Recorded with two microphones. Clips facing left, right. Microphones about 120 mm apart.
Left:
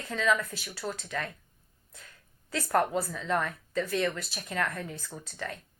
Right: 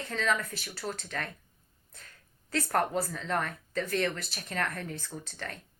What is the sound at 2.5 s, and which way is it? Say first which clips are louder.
Speech: left 2 dB; 45° right (ahead or behind).